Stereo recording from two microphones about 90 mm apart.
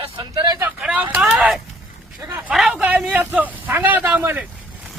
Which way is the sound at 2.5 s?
5° right (ahead or behind).